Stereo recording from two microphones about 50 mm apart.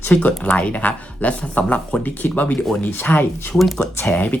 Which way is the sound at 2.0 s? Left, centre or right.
Left.